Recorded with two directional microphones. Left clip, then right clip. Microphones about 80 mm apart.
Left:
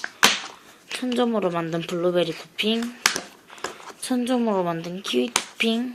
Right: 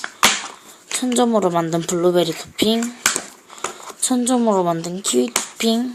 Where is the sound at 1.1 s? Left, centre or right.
Right.